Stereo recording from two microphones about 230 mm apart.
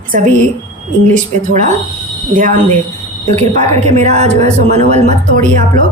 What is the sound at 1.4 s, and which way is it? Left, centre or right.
A woman's voice, right.